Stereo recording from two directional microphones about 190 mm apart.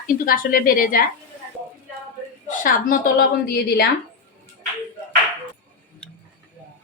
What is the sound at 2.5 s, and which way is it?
A woman's voice, 45° left (ahead or behind).